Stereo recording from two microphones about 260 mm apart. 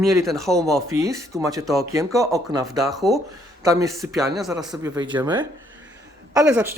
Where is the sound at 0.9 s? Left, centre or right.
Centre.